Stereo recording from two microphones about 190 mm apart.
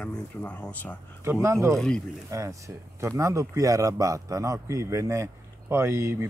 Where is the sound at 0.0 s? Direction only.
5° left (ahead or behind).